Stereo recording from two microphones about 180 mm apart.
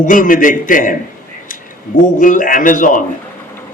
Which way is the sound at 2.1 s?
45° left (ahead or behind).